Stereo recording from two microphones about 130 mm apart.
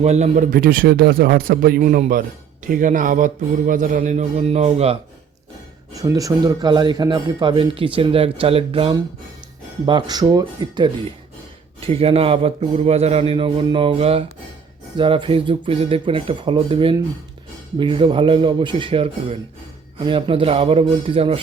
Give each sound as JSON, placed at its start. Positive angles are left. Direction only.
{"t": 0.0, "sound": "a man's voice", "side_deg": -60}
{"t": 5.9, "sound": "speech", "side_deg": -25}
{"t": 9.8, "sound": "speech", "side_deg": -35}
{"t": 11.8, "sound": "speech", "side_deg": -50}